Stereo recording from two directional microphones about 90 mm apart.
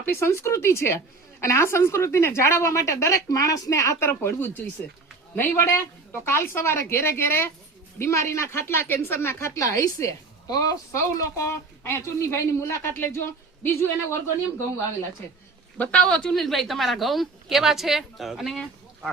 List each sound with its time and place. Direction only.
0.0 s a woman's voice: 25° left (ahead or behind)
15.8 s a woman's voice: 10° left (ahead or behind)